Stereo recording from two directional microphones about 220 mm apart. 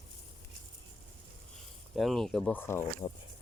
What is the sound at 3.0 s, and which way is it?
Speech, 20° left (ahead or behind).